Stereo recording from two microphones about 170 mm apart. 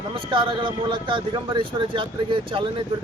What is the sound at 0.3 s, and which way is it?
A man's voice, 30° right (ahead or behind).